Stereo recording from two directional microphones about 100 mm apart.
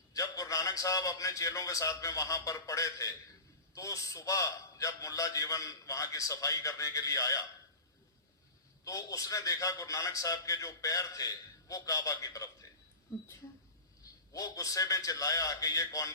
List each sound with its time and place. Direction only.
0.1 s a man's voice: 35° left (ahead or behind)
8.8 s a man's voice: 35° left (ahead or behind)
14.0 s a man's voice: 35° left (ahead or behind)